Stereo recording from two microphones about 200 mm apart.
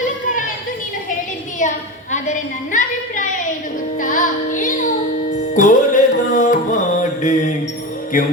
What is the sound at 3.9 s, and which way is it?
Music, 40° left (ahead or behind).